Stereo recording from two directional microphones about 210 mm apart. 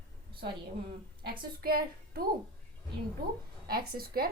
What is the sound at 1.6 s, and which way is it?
Speech, 45° right (ahead or behind).